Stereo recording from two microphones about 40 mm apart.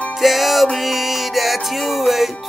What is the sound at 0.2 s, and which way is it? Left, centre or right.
Music, centre.